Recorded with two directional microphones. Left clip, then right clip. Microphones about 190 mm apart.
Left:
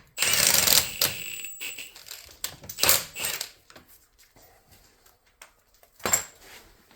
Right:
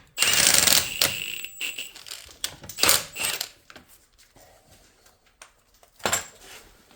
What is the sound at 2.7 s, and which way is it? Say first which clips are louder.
Coin: right 2 dB; 35° right (ahead or behind).